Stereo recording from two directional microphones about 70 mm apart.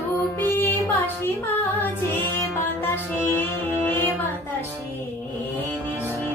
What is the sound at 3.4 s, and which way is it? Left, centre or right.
Music, left.